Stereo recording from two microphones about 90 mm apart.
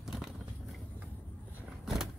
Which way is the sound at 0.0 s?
5° right (ahead or behind).